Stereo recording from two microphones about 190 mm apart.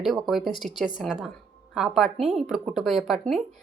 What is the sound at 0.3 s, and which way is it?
Speech, centre (ahead or behind).